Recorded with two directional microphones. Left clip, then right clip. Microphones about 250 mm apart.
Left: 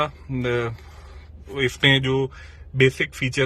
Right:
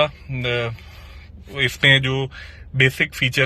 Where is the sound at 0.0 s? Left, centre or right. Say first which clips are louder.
Right 4 dB; centre.